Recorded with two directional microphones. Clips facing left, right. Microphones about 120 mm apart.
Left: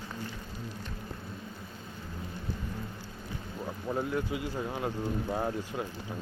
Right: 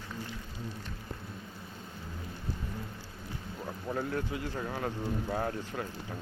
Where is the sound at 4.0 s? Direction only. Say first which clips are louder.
Left 2 dB; 20° left (ahead or behind).